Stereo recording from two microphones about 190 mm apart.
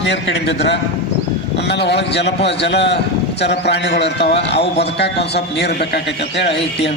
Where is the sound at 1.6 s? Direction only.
60° left (ahead or behind).